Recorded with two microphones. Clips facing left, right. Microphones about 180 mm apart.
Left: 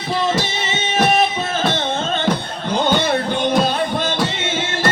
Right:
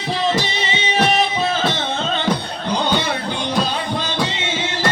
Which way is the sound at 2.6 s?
50° left (ahead or behind).